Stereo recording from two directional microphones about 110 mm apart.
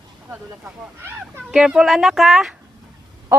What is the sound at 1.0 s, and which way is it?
Speech, 20° right (ahead or behind).